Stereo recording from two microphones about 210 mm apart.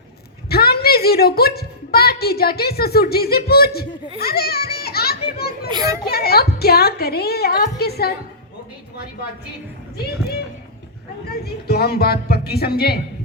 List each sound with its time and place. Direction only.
0.4 s a woman's voice: 50° left (ahead or behind)
5.7 s a child's voice: 15° right (ahead or behind)
6.1 s a woman's voice: 50° left (ahead or behind)
11.3 s a woman's voice: 50° left (ahead or behind)